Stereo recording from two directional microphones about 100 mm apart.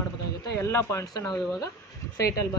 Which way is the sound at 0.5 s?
25° left (ahead or behind).